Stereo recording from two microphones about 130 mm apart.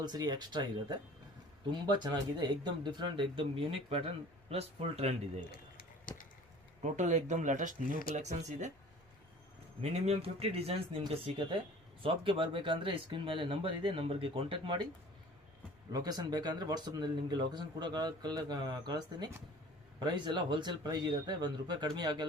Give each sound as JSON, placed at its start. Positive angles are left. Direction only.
{"t": 0.0, "sound": "speech", "side_deg": -35}
{"t": 6.8, "sound": "speech", "side_deg": -65}
{"t": 9.8, "sound": "speech", "side_deg": -55}
{"t": 15.9, "sound": "speech", "side_deg": -30}